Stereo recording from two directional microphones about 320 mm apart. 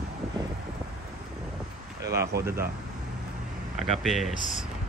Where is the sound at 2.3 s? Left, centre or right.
Right.